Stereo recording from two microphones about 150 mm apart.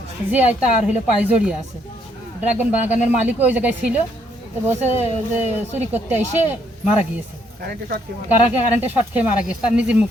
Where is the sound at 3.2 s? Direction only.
10° right (ahead or behind).